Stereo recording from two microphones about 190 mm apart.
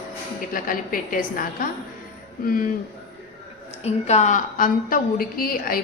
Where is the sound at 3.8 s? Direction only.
35° left (ahead or behind); by 5.8 s 50° left (ahead or behind).